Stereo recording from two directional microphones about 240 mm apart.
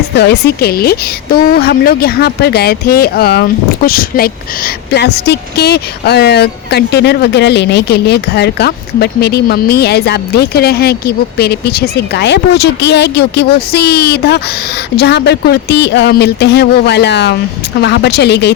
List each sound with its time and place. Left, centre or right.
0.2 s a woman's voice: left